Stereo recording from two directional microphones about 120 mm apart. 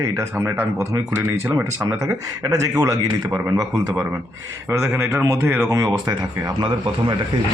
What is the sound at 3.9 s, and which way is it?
Speech, 10° right (ahead or behind).